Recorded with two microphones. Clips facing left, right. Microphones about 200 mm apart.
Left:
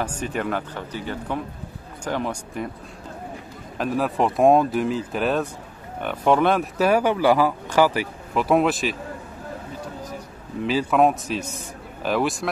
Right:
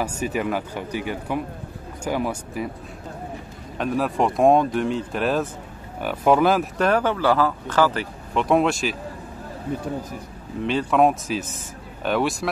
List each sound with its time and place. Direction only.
0.0 s speech: 5° right (ahead or behind)
3.7 s speech: centre (ahead or behind)
9.7 s speech: 55° right (ahead or behind)
10.6 s speech: 5° left (ahead or behind)